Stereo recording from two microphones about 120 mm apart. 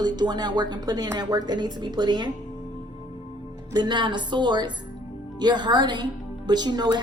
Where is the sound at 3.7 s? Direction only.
40° right (ahead or behind).